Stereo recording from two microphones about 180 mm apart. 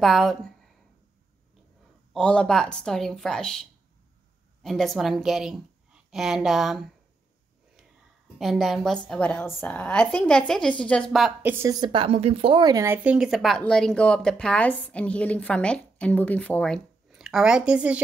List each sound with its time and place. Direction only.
0.0 s speech: centre (ahead or behind)
2.1 s speech: 5° left (ahead or behind)
4.6 s a woman's voice: centre (ahead or behind)
8.4 s speech: centre (ahead or behind)
11.5 s a woman's voice: 15° right (ahead or behind)
11.9 s speech: 30° right (ahead or behind); by 18.0 s 5° right (ahead or behind)